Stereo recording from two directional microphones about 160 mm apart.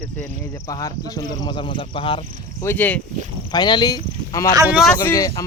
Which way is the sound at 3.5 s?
25° left (ahead or behind).